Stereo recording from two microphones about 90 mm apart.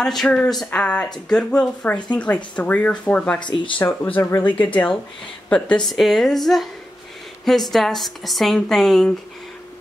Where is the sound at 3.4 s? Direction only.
60° left (ahead or behind).